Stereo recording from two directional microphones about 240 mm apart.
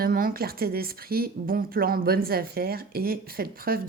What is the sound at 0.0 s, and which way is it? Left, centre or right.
Speech, right.